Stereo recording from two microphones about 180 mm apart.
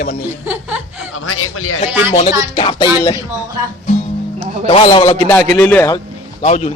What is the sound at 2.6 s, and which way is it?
Speech, 30° left (ahead or behind).